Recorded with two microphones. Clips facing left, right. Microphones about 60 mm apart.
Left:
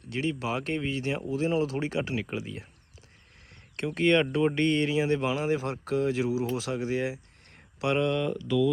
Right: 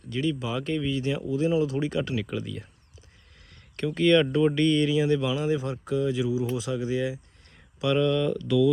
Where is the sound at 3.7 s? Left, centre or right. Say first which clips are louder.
Right 3 dB; left.